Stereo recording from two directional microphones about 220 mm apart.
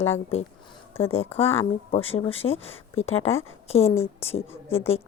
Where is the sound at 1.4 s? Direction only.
25° left (ahead or behind).